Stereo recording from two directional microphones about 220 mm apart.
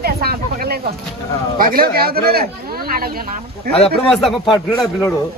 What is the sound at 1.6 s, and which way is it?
Speech, 40° right (ahead or behind).